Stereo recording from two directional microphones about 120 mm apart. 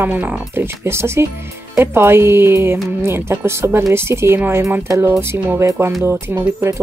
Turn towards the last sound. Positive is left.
turn(degrees=-20)  # may be behind; listen again after turning